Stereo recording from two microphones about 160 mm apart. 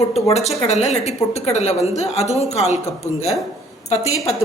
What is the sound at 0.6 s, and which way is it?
A woman's voice, 40° left (ahead or behind).